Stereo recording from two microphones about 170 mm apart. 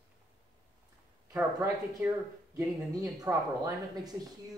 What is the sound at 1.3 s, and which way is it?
A woman's voice, 10° right (ahead or behind).